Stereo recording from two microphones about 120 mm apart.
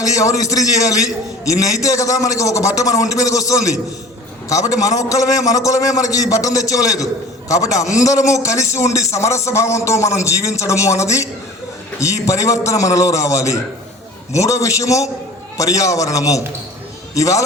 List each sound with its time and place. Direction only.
0.0 s a man's voice: 30° left (ahead or behind)